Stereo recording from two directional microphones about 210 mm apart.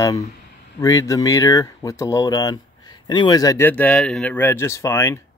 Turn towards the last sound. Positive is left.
turn(degrees=15)  # may be behind; listen again after turning